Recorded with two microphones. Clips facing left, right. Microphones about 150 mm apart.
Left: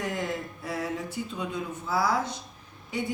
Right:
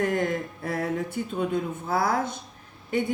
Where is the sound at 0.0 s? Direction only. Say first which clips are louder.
Right 6 dB; 55° right (ahead or behind).